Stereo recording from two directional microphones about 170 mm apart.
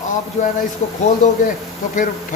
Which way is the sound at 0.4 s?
45° left (ahead or behind).